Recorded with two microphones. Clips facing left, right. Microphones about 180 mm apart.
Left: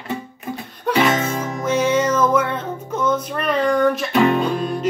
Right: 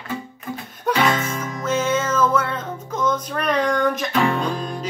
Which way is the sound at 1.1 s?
30° left (ahead or behind).